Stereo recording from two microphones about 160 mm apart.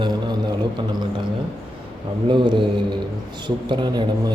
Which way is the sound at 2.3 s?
30° right (ahead or behind).